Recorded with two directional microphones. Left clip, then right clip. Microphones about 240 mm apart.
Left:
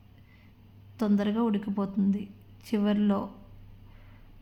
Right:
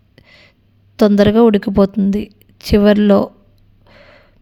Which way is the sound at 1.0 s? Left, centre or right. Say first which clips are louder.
Right 19 dB; right.